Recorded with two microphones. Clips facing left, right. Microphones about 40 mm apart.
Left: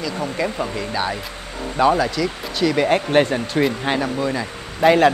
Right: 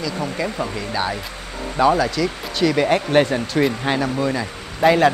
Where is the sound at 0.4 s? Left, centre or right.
Left.